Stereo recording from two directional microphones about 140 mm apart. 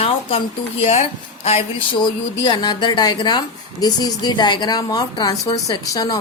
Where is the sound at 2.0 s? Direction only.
30° left (ahead or behind).